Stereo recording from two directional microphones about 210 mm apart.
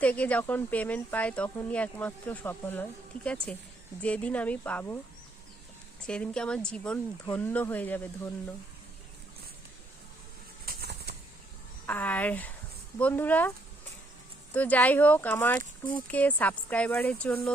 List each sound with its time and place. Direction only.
0.0 s speech: 5° left (ahead or behind)
6.1 s speech: 5° left (ahead or behind)
10.7 s a sound: 50° right (ahead or behind)
11.9 s speech: 10° left (ahead or behind)
14.5 s speech: 10° left (ahead or behind)